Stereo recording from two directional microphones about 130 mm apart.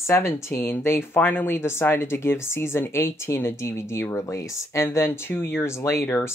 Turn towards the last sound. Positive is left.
turn(degrees=20)  # may be behind; listen again after turning